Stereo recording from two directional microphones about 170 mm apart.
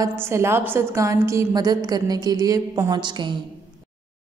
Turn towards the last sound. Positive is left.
turn(degrees=-25)  # may be behind; listen again after turning